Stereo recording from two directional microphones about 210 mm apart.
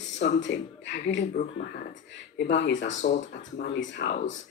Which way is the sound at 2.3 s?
55° left (ahead or behind).